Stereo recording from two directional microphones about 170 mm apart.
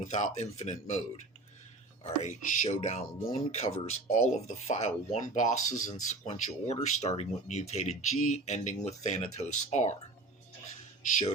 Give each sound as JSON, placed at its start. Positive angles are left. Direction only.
{"t": 0.1, "sound": "speech", "side_deg": 40}